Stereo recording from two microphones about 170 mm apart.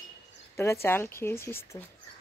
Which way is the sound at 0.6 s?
15° left (ahead or behind).